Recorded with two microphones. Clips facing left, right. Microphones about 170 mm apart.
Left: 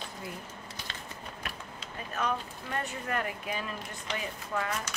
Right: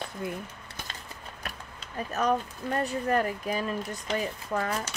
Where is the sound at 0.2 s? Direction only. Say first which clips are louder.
Right 9 dB; 55° right (ahead or behind).